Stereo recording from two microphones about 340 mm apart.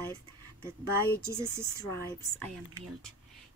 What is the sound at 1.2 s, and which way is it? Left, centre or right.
Speech, centre.